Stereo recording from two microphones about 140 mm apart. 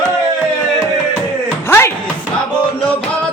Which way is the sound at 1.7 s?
20° left (ahead or behind).